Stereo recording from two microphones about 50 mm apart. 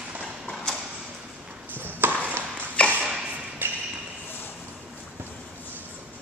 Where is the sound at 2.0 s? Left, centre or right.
Right.